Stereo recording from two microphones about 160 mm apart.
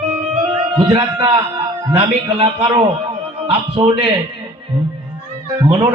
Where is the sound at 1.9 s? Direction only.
35° right (ahead or behind).